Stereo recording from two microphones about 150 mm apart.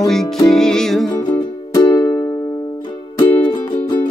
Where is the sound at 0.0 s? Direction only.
Centre (ahead or behind).